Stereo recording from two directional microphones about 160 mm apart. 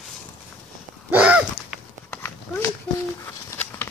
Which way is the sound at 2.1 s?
15° left (ahead or behind).